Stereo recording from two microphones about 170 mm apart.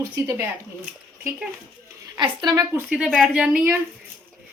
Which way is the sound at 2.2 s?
25° right (ahead or behind).